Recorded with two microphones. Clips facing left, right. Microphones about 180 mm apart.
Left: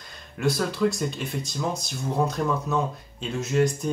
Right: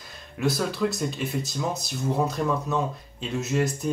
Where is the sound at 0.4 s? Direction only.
Centre (ahead or behind).